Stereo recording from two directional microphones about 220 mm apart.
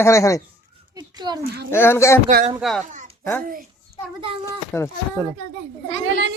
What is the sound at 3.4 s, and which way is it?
Speech, 40° right (ahead or behind).